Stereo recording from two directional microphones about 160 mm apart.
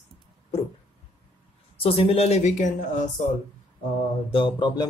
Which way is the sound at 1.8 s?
35° left (ahead or behind).